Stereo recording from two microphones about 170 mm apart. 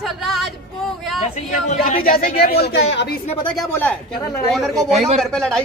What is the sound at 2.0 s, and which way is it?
Speech, 60° left (ahead or behind).